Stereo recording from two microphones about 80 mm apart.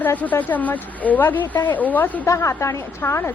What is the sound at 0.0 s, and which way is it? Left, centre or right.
A woman's voice, left.